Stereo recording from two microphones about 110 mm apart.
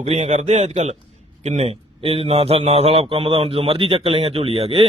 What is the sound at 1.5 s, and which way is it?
A man's voice, 70° right (ahead or behind).